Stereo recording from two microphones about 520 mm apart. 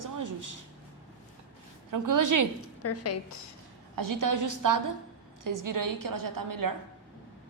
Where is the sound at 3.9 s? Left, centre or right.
Right.